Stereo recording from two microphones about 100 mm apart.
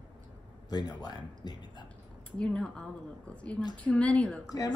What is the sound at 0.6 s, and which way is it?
Speech, 45° left (ahead or behind).